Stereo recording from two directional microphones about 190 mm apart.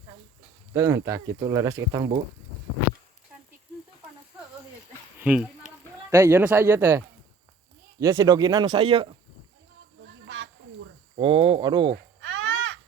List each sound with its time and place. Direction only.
0.7 s speech: 15° right (ahead or behind)
5.2 s speech: 5° right (ahead or behind)
8.0 s speech: 20° right (ahead or behind)
10.2 s a sound: 90° right
11.1 s speech: 30° right (ahead or behind)
12.2 s babbling: 85° right